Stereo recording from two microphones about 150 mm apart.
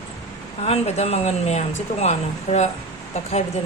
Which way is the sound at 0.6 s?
45° left (ahead or behind).